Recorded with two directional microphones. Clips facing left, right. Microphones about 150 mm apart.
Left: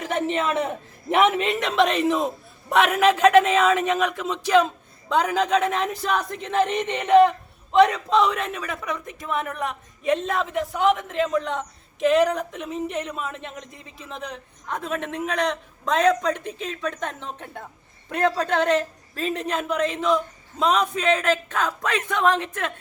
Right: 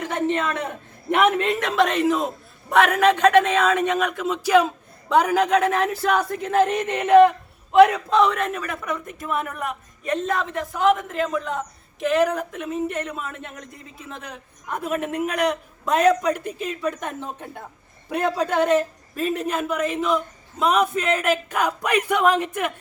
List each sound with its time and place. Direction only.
1.0 s speech: centre (ahead or behind)